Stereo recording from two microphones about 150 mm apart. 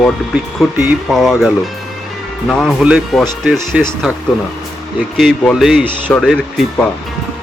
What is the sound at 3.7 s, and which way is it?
Speech, 15° right (ahead or behind).